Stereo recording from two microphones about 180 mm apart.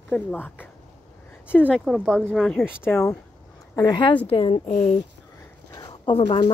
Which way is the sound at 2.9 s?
15° left (ahead or behind).